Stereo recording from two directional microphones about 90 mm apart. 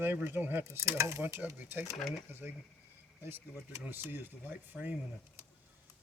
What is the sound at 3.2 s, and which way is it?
Speech, 25° right (ahead or behind).